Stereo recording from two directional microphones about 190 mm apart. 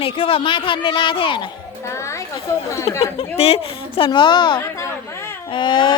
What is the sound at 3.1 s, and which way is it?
A woman's voice, 30° left (ahead or behind).